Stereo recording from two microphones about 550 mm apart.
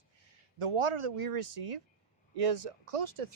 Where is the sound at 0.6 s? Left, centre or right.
Right.